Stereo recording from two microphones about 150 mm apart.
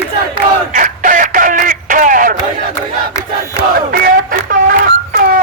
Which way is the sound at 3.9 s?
85° right.